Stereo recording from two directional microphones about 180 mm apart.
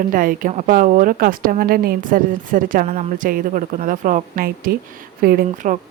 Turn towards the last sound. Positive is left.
turn(degrees=-45)  # may be behind; listen again after turning